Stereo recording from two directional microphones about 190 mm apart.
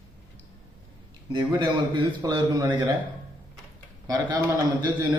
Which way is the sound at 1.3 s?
25° right (ahead or behind).